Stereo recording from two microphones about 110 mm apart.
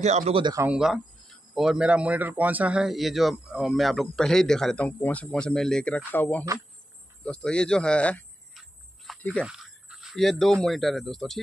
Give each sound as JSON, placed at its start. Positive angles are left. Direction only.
{"t": 0.0, "sound": "speech", "side_deg": -90}
{"t": 0.7, "sound": "a man's voice", "side_deg": -5}
{"t": 8.5, "sound": "a sound", "side_deg": 0}
{"t": 9.2, "sound": "speech", "side_deg": 10}
{"t": 9.5, "sound": "speech", "side_deg": -5}